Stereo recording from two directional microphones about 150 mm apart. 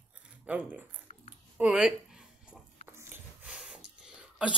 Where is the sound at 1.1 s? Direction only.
55° left (ahead or behind).